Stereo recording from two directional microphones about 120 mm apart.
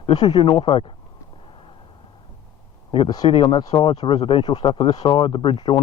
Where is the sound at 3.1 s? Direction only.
35° left (ahead or behind).